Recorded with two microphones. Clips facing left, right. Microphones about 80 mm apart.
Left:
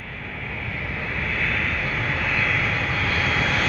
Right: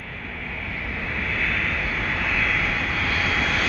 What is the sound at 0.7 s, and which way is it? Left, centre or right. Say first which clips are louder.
Vehicle: even; centre.